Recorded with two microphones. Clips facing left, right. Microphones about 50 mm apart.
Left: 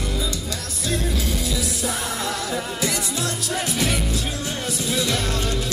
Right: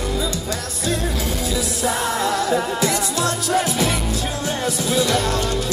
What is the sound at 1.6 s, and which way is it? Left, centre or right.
Music, right.